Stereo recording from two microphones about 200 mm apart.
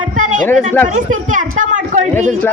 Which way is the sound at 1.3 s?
40° right (ahead or behind).